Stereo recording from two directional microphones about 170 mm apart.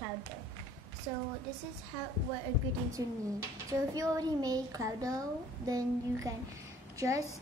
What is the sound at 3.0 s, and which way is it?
A woman's voice, 20° right (ahead or behind).